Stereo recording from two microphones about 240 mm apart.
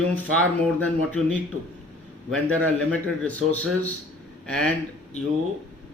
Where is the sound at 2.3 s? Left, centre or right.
Centre.